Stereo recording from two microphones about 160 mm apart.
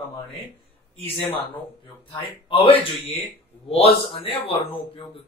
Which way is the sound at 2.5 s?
35° left (ahead or behind).